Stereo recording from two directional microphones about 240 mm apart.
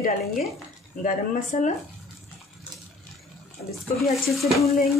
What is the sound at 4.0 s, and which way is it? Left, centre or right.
Speech, centre.